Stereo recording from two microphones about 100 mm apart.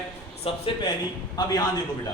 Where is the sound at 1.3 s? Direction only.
40° left (ahead or behind).